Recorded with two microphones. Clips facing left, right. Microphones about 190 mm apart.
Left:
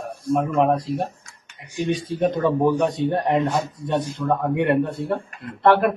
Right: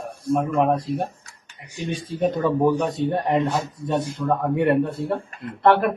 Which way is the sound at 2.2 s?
Centre (ahead or behind).